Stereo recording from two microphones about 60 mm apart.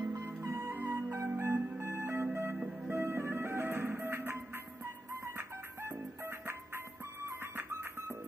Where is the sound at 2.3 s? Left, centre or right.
Right.